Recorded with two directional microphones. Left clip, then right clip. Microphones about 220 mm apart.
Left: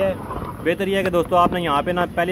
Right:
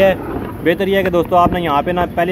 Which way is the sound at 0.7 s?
Centre (ahead or behind).